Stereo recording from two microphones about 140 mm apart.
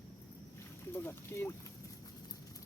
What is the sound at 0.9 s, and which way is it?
Speech, 15° left (ahead or behind).